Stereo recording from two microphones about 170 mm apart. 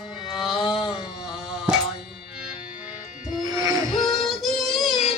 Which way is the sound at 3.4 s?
20° right (ahead or behind).